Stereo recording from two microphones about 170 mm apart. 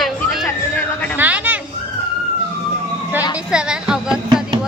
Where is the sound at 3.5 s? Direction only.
5° right (ahead or behind).